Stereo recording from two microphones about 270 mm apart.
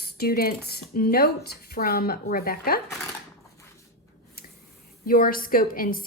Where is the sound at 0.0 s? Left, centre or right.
Left.